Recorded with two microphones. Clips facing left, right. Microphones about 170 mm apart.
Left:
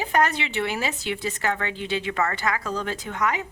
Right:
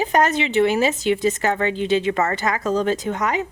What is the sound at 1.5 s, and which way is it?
Speech, 35° right (ahead or behind).